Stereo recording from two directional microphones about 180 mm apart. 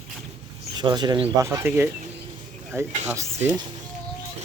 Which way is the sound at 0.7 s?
25° right (ahead or behind).